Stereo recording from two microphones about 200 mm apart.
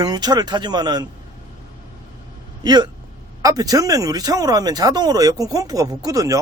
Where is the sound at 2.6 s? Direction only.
20° right (ahead or behind).